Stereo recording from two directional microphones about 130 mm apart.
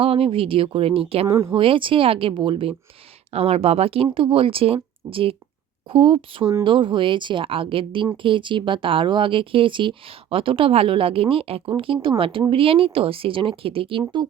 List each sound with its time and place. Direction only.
0.0 s speech: 45° right (ahead or behind)
1.3 s speech: 20° right (ahead or behind)
1.5 s speech: 40° right (ahead or behind)